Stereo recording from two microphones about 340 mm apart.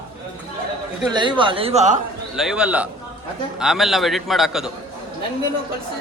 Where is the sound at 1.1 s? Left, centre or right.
Centre.